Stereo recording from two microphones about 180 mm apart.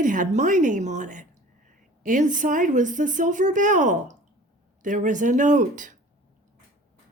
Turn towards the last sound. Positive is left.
turn(degrees=-45)  # may be behind; listen again after turning